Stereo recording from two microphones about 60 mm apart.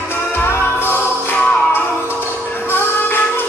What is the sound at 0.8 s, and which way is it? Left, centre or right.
Music, left.